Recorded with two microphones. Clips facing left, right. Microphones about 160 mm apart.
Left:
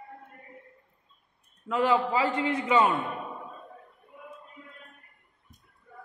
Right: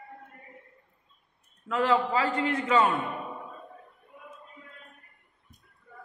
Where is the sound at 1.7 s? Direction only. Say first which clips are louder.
Even; 20° left (ahead or behind).